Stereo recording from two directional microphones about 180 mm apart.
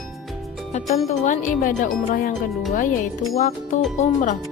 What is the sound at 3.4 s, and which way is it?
Speech, 40° left (ahead or behind).